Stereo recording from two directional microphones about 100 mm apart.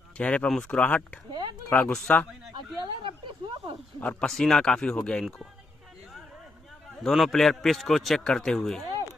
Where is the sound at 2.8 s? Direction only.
55° right (ahead or behind).